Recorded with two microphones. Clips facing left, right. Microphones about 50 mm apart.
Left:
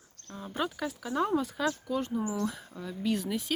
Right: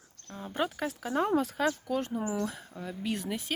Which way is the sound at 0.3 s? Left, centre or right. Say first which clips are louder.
Even; right.